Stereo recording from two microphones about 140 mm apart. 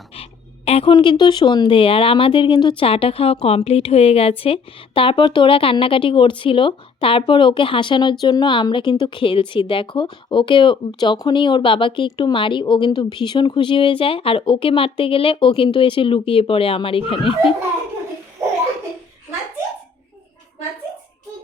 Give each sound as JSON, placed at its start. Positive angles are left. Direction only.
{"t": 0.1, "sound": "a woman's voice", "side_deg": 45}